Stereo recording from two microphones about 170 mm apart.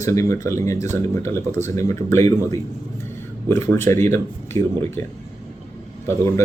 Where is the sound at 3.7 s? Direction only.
15° left (ahead or behind).